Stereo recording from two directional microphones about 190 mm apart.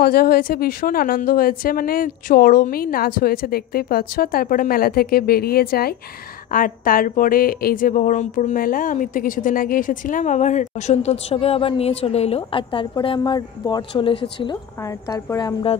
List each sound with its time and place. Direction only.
0.0 s a woman's voice: 55° left (ahead or behind); by 15.8 s 25° left (ahead or behind)